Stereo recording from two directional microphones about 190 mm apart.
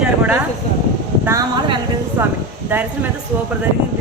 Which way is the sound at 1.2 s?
15° right (ahead or behind).